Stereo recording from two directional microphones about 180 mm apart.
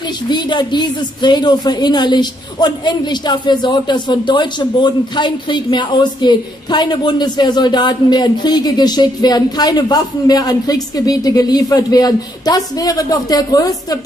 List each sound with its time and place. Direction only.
0.3 s a woman's voice: 25° left (ahead or behind)